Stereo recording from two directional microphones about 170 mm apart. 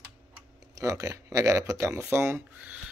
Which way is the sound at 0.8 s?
20° right (ahead or behind).